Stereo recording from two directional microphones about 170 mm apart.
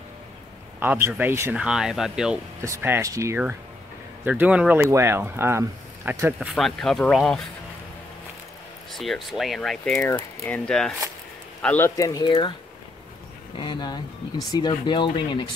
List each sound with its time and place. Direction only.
0.7 s speech: 15° right (ahead or behind)
2.6 s speech: 15° right (ahead or behind)
6.5 s speech: centre (ahead or behind)
8.9 s speech: centre (ahead or behind); by 12.5 s 25° left (ahead or behind)
13.6 s speech: 25° left (ahead or behind)